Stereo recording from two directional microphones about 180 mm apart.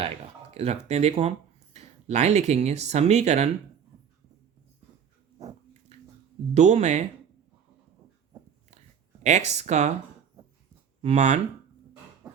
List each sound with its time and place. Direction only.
0.5 s speech: 35° right (ahead or behind)
5.9 s a sound: 40° right (ahead or behind)
6.5 s speech: 40° right (ahead or behind)
9.2 s speech: 40° right (ahead or behind)
11.0 s speech: 40° right (ahead or behind)
12.2 s a sound: 5° right (ahead or behind)